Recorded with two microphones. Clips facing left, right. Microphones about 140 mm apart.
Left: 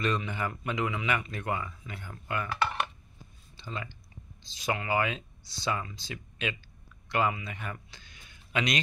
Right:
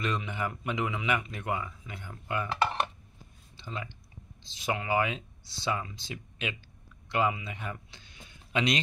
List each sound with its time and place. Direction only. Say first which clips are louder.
0.0 s speech: left 2 dB; 15° right (ahead or behind)